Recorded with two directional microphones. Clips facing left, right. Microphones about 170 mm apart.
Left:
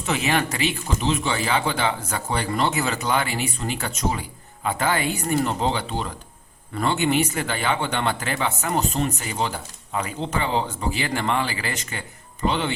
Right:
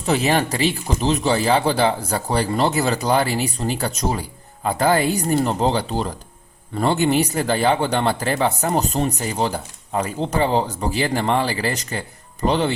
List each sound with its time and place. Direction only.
0.0 s speech: 35° right (ahead or behind)